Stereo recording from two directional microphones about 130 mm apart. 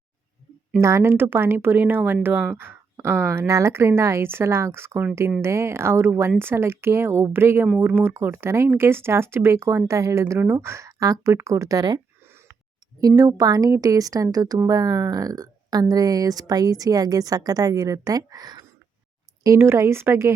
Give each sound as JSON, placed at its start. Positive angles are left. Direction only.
{"t": 0.8, "sound": "speech", "side_deg": -20}
{"t": 13.0, "sound": "speech", "side_deg": -30}